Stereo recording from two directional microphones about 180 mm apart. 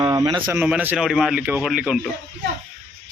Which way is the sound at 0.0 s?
20° right (ahead or behind).